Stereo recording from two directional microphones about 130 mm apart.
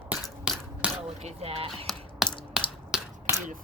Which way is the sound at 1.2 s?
55° right (ahead or behind).